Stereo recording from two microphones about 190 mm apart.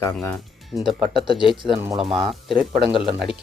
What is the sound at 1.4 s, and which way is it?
Speech, 5° right (ahead or behind).